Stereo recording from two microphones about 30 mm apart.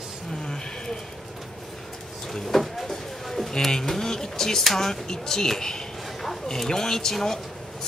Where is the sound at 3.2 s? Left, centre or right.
Centre.